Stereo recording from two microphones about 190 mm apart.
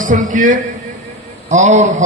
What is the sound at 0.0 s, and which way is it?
A man's voice, 45° right (ahead or behind).